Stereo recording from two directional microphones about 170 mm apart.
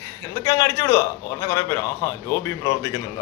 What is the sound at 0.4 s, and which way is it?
A man's voice, 20° left (ahead or behind).